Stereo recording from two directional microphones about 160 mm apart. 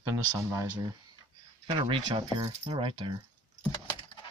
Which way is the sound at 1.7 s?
30° right (ahead or behind).